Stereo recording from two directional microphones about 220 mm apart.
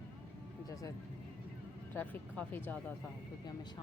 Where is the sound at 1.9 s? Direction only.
5° left (ahead or behind).